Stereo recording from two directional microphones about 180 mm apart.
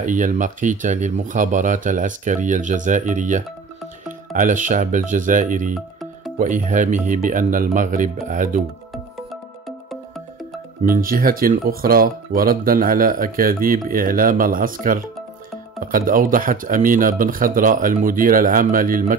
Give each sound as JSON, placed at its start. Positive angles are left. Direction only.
{"t": 0.0, "sound": "speech", "side_deg": -45}
{"t": 5.8, "sound": "music", "side_deg": 0}
{"t": 6.3, "sound": "speech", "side_deg": -50}
{"t": 9.7, "sound": "music", "side_deg": 0}
{"t": 10.8, "sound": "speech", "side_deg": -50}